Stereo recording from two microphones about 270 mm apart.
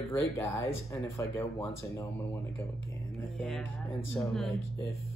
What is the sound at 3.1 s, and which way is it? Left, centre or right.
Speech, centre.